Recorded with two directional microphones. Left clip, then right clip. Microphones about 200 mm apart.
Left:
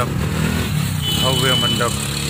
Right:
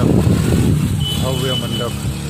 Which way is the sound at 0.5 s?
60° right (ahead or behind).